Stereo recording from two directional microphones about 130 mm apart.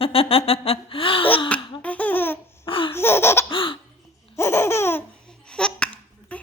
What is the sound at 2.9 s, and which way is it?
Laughter, 20° left (ahead or behind).